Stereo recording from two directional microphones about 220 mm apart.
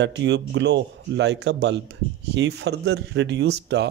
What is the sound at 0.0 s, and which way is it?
Speech, 55° right (ahead or behind).